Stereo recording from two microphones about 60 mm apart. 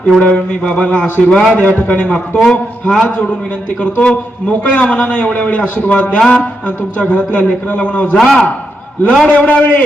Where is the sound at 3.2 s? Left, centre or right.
Left.